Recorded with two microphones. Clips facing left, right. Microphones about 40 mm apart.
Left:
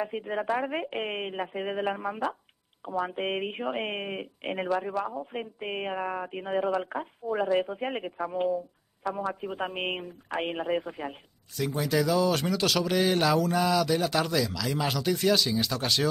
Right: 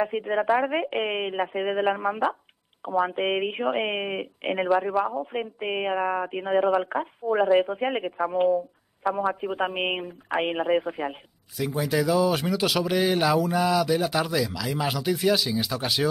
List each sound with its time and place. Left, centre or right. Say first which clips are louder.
0.0 s speech: right 6 dB; centre